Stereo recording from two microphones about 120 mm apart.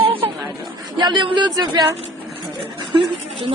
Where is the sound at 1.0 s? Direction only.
40° right (ahead or behind).